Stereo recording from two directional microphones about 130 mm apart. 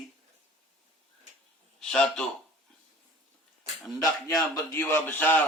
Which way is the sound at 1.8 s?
5° left (ahead or behind).